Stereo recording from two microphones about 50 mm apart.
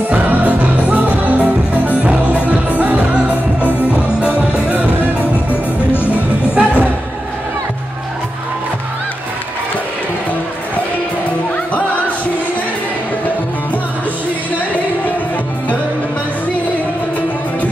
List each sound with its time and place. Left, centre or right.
0.1 s music: right
6.1 s music: right